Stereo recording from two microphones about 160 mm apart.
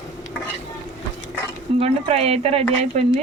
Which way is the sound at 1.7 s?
40° right (ahead or behind).